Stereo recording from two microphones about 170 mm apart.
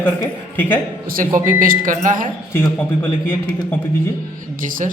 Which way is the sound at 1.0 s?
55° right (ahead or behind).